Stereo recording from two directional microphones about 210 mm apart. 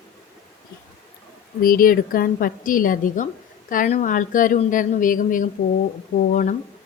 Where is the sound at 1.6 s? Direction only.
40° left (ahead or behind).